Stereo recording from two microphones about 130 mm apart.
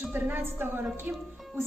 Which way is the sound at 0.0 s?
15° right (ahead or behind).